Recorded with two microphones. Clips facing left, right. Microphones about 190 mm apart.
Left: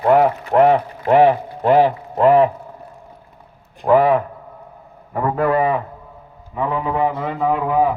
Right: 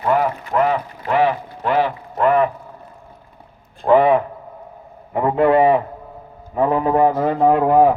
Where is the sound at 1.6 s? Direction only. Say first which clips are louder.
Left 5 dB; 40° left (ahead or behind).